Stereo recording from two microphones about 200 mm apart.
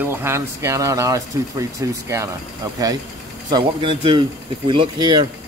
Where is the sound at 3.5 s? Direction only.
25° right (ahead or behind).